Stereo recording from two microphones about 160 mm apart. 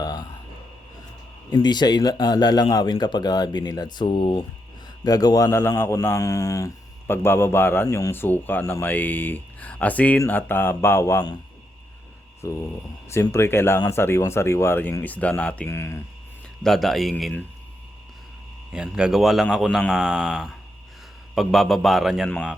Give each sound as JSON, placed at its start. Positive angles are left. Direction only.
{"t": 0.0, "sound": "a sound", "side_deg": 25}
{"t": 1.5, "sound": "a man's voice", "side_deg": 25}
{"t": 13.1, "sound": "a man's voice", "side_deg": 15}
{"t": 16.6, "sound": "a man's voice", "side_deg": 0}
{"t": 18.7, "sound": "a man's voice", "side_deg": -5}